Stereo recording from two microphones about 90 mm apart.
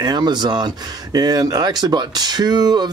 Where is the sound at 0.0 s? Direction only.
50° right (ahead or behind).